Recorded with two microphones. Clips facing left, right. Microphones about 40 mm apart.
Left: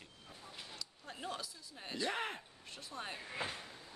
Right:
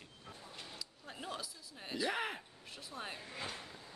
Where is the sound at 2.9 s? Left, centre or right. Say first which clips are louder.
Even; centre.